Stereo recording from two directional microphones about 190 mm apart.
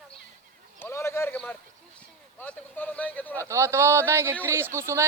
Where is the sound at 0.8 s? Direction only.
15° left (ahead or behind).